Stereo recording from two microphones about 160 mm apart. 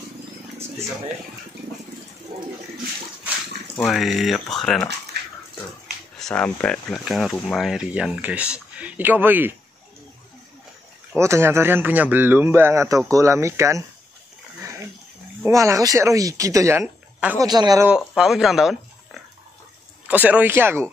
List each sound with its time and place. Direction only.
2.3 s a sound: 65° right (ahead or behind)
3.7 s speech: centre (ahead or behind)
5.1 s dog: 90° right
6.1 s speech: 5° left (ahead or behind); by 9.5 s 10° right (ahead or behind)
11.1 s speech: 15° right (ahead or behind)
15.4 s speech: 20° right (ahead or behind)
16.8 s a sound: 10° right (ahead or behind)
17.4 s speech: 25° right (ahead or behind)
17.8 s speech: 5° right (ahead or behind)